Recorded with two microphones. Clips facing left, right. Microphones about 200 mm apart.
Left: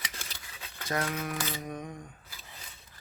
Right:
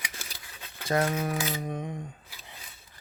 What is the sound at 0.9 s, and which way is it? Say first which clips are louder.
Speech: right 6 dB; 30° right (ahead or behind).